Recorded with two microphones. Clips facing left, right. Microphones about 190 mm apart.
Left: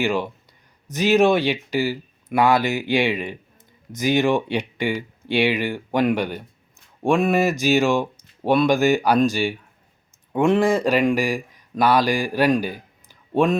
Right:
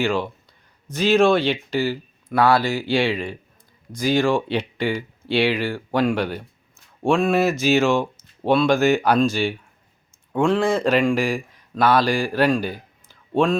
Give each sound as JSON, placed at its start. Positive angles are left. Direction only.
{"t": 0.0, "sound": "speech", "side_deg": 15}